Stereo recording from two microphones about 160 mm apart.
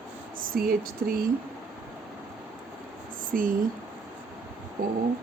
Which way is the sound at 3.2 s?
60° right (ahead or behind).